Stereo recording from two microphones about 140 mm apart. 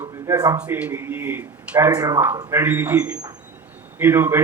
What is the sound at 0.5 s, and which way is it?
A man's voice, 10° right (ahead or behind).